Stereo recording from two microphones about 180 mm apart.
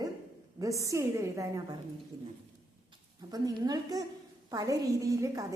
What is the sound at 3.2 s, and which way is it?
A woman's voice, 20° right (ahead or behind).